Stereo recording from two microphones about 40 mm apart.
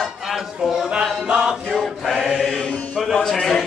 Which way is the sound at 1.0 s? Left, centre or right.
Centre.